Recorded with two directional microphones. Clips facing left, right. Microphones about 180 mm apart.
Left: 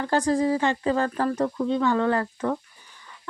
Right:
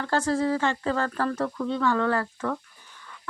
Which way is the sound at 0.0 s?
15° left (ahead or behind).